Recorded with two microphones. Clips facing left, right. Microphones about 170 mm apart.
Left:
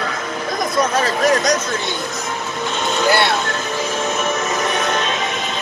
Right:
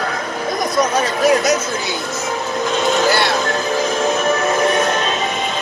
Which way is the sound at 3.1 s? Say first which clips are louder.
Even; 60° left (ahead or behind).